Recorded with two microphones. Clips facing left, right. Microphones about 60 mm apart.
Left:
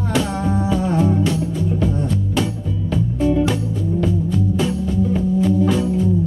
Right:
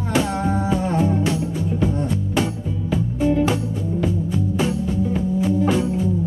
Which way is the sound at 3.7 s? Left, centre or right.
Centre.